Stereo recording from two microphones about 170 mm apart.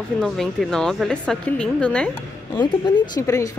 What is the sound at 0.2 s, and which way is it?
A woman's voice, centre (ahead or behind).